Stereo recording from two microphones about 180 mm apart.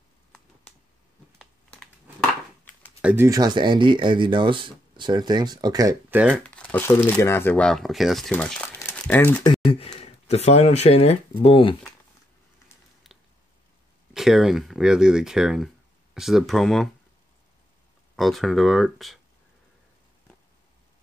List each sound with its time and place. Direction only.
1.4 s crumpling: 5° left (ahead or behind)
3.0 s speech: 5° right (ahead or behind)
3.3 s speech: 20° right (ahead or behind)
6.0 s speech: 10° right (ahead or behind)
6.3 s speech: 5° left (ahead or behind)
9.9 s speech: 35° left (ahead or behind)
14.1 s speech: centre (ahead or behind)
18.1 s speech: centre (ahead or behind)